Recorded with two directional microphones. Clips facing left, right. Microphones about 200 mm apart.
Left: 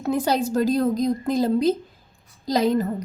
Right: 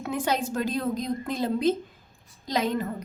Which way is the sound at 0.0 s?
40° left (ahead or behind).